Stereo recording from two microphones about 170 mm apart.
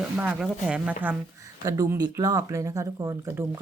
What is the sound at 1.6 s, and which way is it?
Speech, 20° right (ahead or behind).